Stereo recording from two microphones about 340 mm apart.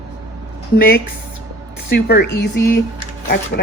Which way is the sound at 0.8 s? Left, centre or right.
Left.